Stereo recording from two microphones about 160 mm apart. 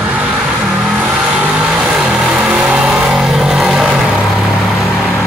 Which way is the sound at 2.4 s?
Centre (ahead or behind).